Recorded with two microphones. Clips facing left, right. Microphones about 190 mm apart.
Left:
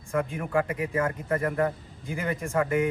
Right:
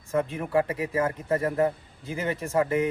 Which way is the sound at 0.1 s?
30° right (ahead or behind).